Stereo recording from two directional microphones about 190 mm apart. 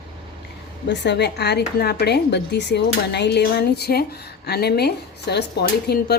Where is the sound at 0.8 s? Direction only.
65° left (ahead or behind).